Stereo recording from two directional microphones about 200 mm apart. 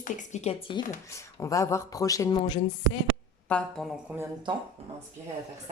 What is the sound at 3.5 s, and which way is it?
Speech, 5° left (ahead or behind).